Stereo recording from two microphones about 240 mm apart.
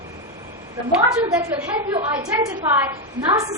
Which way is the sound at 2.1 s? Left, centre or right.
Centre.